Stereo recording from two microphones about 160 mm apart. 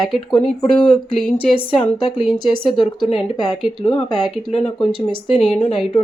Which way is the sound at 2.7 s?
30° left (ahead or behind).